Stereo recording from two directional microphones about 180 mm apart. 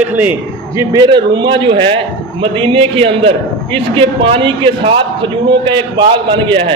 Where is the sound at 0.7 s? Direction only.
20° right (ahead or behind).